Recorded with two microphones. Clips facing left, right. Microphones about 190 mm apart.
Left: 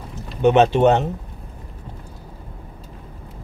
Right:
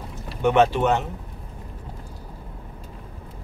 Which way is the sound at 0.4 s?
20° left (ahead or behind).